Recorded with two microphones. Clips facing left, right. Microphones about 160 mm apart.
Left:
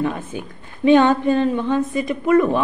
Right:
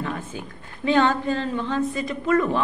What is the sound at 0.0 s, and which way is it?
A woman's voice, 20° left (ahead or behind).